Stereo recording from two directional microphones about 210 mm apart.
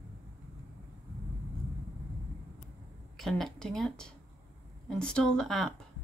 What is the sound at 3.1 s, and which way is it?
Speech, centre (ahead or behind).